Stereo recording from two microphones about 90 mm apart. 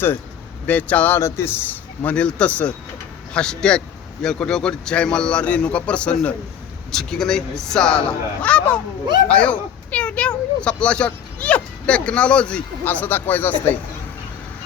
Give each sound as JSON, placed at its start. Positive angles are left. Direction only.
{"t": 0.7, "sound": "speech", "side_deg": 15}